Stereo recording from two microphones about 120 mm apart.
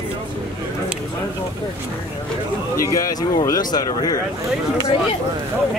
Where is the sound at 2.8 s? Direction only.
30° left (ahead or behind).